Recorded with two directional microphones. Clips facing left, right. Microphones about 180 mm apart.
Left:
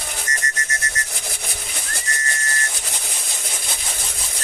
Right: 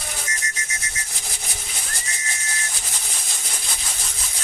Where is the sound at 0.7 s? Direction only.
60° left (ahead or behind).